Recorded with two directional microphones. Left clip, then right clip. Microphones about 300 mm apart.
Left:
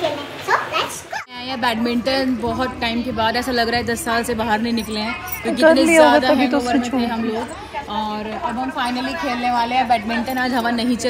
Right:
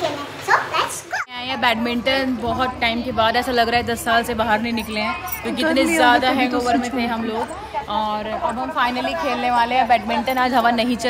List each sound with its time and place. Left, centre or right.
0.5 s bow-wow: centre
1.9 s a woman's voice: centre
9.1 s a woman's voice: centre
9.4 s a woman's voice: centre